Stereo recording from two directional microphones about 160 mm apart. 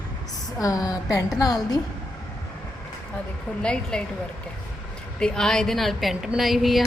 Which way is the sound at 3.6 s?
5° left (ahead or behind).